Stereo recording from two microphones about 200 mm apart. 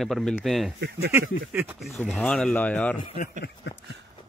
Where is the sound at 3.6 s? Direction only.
65° left (ahead or behind).